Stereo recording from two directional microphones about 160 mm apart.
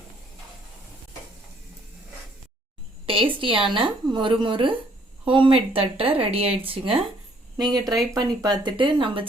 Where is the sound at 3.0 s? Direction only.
35° right (ahead or behind).